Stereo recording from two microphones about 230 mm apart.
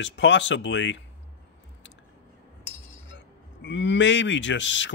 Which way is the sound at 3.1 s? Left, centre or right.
Left.